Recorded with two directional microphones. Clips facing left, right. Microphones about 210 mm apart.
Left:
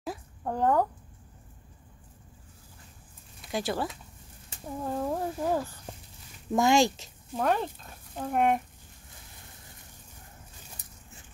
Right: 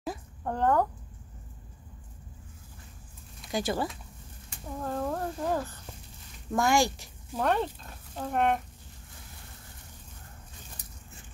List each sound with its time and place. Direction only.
0.0 s a sound: 5° left (ahead or behind)
3.5 s speech: centre (ahead or behind)
4.8 s speech: 10° left (ahead or behind)
7.3 s speech: centre (ahead or behind)